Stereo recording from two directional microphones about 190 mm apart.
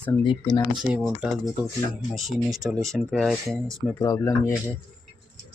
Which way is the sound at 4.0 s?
20° left (ahead or behind).